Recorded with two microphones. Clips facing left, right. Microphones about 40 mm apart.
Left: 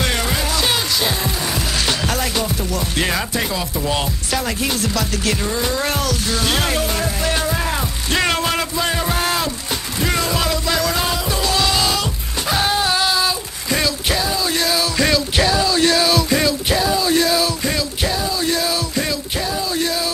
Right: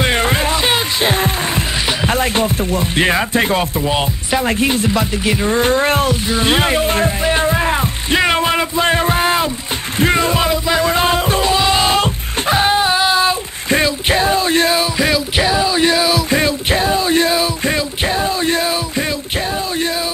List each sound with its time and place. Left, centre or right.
0.0 s music: right
1.9 s music: centre
2.1 s music: right
3.7 s chopping: right
5.5 s a sound: right
6.2 s chopping: right
7.2 s music: right
11.5 s a sound: right
12.5 s a sound: right
15.0 s music: centre
16.3 s music: right